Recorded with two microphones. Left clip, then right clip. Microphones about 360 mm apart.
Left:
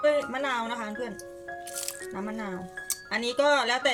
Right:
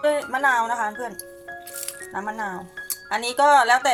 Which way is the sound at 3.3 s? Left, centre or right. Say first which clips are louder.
Right 8 dB; right.